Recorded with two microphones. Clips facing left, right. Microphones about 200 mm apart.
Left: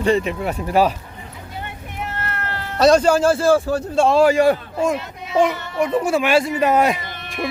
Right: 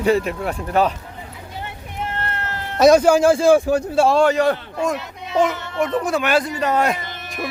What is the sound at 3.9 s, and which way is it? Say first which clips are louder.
A child's voice: left 2 dB; 5° right (ahead or behind).